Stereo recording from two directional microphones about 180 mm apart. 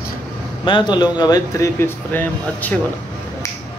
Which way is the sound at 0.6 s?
25° left (ahead or behind).